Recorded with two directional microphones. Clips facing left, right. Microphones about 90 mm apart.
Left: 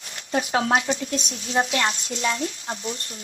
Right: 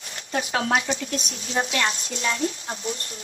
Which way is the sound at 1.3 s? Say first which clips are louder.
Left 4 dB; 30° left (ahead or behind).